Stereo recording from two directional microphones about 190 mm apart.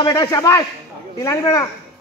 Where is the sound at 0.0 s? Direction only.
20° left (ahead or behind).